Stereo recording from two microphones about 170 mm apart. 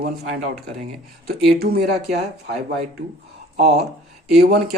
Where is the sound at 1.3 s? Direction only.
70° right (ahead or behind).